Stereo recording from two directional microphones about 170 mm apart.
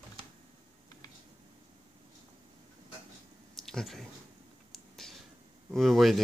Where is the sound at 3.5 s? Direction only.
Centre (ahead or behind).